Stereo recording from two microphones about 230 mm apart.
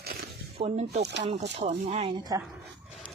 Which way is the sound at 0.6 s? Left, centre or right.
Right.